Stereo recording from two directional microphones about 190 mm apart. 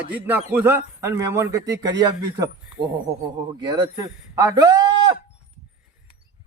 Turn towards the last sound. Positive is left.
turn(degrees=-25)  # may be behind; listen again after turning